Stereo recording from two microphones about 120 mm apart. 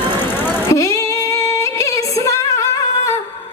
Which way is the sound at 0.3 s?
15° left (ahead or behind).